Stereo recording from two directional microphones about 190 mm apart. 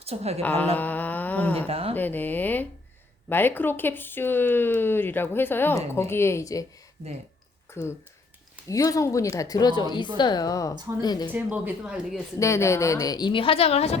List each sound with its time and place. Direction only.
0.0 s a woman's voice: 35° right (ahead or behind)
0.4 s speech: 10° left (ahead or behind)
0.8 s a sound: 10° left (ahead or behind)
1.5 s speech: 30° right (ahead or behind)
2.0 s speech: 10° left (ahead or behind)
7.8 s a woman's voice: 15° left (ahead or behind)
11.3 s speech: 10° right (ahead or behind)
12.4 s a woman's voice: 15° left (ahead or behind); by 14.0 s 35° left (ahead or behind)